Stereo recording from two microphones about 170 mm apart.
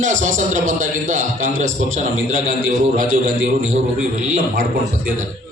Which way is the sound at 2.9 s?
55° right (ahead or behind).